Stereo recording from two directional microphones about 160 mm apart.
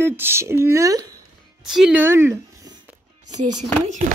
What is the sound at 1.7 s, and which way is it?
Speech, 5° right (ahead or behind).